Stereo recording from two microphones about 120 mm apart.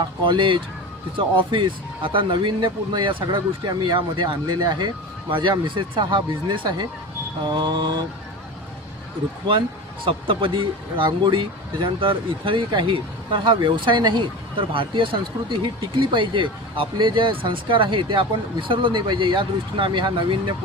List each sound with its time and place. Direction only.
0.3 s speech: 45° right (ahead or behind)
10.0 s speech: 45° right (ahead or behind)